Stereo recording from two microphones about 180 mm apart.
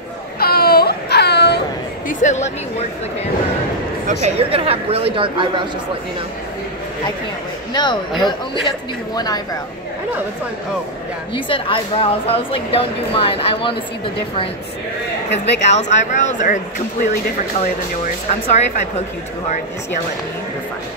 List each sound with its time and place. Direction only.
0.4 s baby cry: 60° left (ahead or behind)
2.0 s a woman's voice: 45° left (ahead or behind)
4.1 s speech: 35° right (ahead or behind)
7.7 s a man's voice: 25° left (ahead or behind)
11.3 s a woman's voice: 30° left (ahead or behind)
15.3 s speech: 75° left (ahead or behind)
15.7 s a woman's voice: 40° left (ahead or behind)
17.6 s a woman's voice: 40° left (ahead or behind)